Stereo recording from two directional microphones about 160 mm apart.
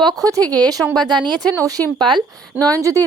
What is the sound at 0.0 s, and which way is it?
Speech, 25° right (ahead or behind).